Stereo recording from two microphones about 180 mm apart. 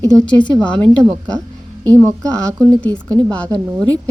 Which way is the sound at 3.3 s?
5° left (ahead or behind).